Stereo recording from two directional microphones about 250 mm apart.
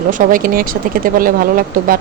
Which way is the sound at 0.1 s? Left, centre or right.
Right.